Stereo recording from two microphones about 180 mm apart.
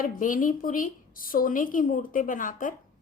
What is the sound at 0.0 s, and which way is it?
A woman's voice, 50° left (ahead or behind).